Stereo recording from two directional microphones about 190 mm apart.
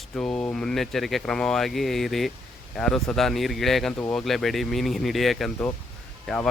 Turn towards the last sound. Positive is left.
turn(degrees=5)  # may be behind; listen again after turning